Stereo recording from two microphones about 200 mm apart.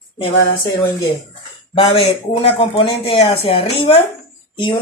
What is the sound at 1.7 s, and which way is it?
Speech, 25° left (ahead or behind).